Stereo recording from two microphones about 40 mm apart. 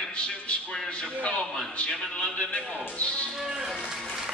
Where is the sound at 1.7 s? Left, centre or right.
Left.